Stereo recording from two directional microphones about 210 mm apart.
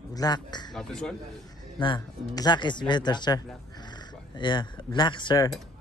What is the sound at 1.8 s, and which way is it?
Speech, 20° left (ahead or behind).